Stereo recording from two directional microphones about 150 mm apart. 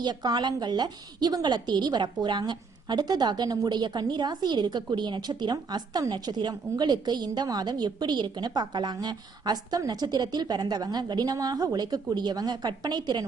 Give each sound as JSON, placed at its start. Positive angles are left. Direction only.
{"t": 0.0, "sound": "a woman's voice", "side_deg": -30}